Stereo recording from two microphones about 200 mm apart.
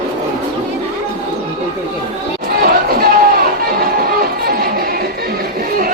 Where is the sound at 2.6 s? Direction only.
50° right (ahead or behind).